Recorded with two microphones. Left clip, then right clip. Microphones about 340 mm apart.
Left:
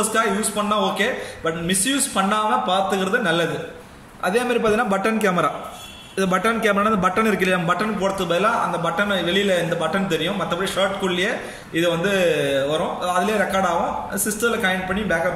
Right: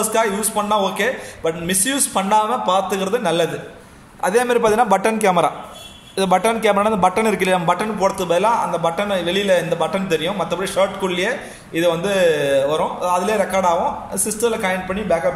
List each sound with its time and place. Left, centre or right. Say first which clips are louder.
0.1 s a man's voice: right 2 dB; centre